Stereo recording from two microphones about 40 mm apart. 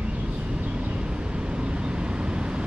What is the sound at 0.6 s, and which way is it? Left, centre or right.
Vehicle, right.